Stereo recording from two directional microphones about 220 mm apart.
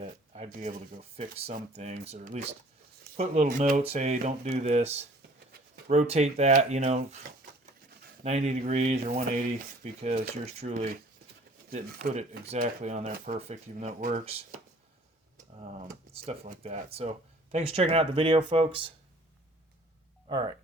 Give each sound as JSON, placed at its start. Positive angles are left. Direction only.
{"t": 0.0, "sound": "speech", "side_deg": -30}
{"t": 8.2, "sound": "speech", "side_deg": -30}
{"t": 15.5, "sound": "speech", "side_deg": -30}
{"t": 20.2, "sound": "speech", "side_deg": -20}